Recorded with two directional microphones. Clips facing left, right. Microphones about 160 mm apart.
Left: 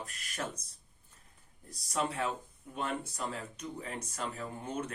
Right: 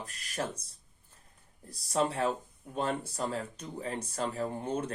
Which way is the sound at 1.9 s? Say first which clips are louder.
Right 4 dB; 30° right (ahead or behind).